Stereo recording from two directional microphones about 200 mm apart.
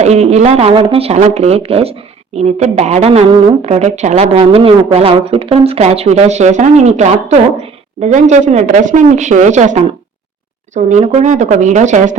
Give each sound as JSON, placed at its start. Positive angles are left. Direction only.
{"t": 0.0, "sound": "speech", "side_deg": -35}
{"t": 10.8, "sound": "speech", "side_deg": -35}